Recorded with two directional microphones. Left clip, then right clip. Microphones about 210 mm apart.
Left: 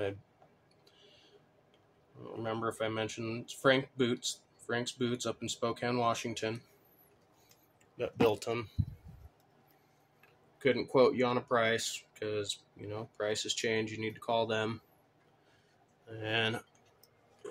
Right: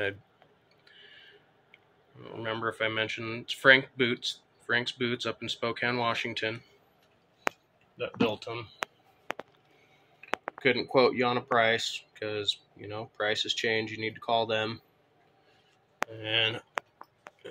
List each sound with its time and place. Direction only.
2.2 s speech: 20° left (ahead or behind)
8.0 s speech: 45° left (ahead or behind)
10.6 s speech: 15° left (ahead or behind)
16.1 s speech: 25° left (ahead or behind)